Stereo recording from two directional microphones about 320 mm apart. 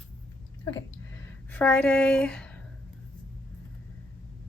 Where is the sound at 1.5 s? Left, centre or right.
Centre.